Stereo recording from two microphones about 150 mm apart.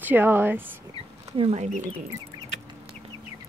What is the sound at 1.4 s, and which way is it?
Speech, 45° right (ahead or behind).